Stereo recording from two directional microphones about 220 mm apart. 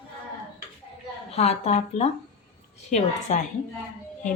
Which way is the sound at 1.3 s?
30° left (ahead or behind).